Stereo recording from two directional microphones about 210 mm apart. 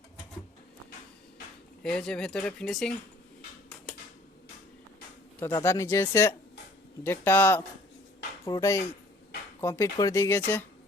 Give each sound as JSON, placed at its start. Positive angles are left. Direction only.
{"t": 1.8, "sound": "speech", "side_deg": 5}
{"t": 5.4, "sound": "speech", "side_deg": 15}